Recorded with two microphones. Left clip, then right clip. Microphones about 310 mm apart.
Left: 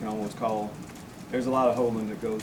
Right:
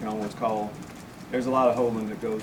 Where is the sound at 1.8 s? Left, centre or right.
Centre.